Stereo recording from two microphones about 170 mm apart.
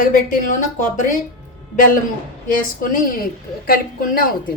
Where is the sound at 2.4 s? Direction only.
55° left (ahead or behind).